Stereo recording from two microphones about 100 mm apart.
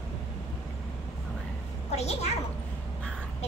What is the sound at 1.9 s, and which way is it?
Speech, 90° left.